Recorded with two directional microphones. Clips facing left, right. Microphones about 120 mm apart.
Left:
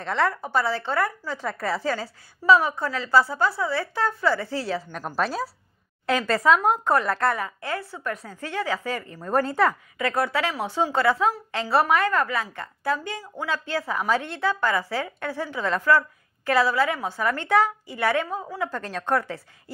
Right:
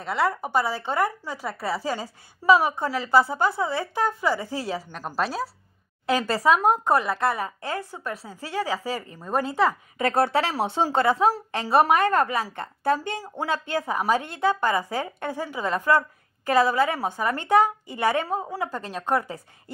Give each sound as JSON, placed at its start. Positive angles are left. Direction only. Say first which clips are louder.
{"t": 0.0, "sound": "a woman's voice", "louder": "even", "side_deg": -5}
{"t": 4.9, "sound": "a woman's voice", "louder": "even", "side_deg": -5}
{"t": 6.2, "sound": "a woman's voice", "louder": "left 1 dB", "side_deg": -15}
{"t": 9.9, "sound": "speech", "louder": "right 3 dB", "side_deg": -30}
{"t": 10.6, "sound": "speech", "louder": "left 2 dB", "side_deg": -25}
{"t": 18.7, "sound": "a woman's voice", "louder": "left 1 dB", "side_deg": -10}